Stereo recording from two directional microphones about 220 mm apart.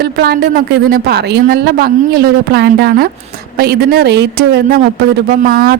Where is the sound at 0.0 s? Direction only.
45° right (ahead or behind).